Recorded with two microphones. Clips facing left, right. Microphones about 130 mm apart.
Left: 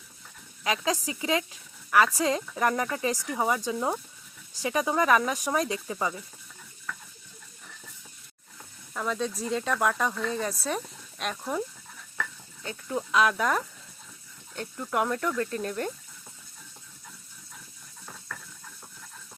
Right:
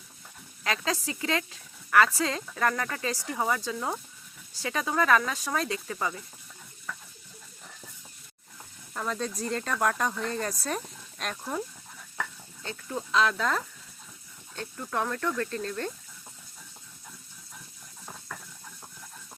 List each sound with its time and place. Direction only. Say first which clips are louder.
0.6 s speech: left 2 dB; 15° left (ahead or behind)
8.9 s speech: left 2 dB; centre (ahead or behind)
12.6 s speech: left 3 dB; 10° left (ahead or behind)
14.8 s speech: left 2 dB; 15° left (ahead or behind)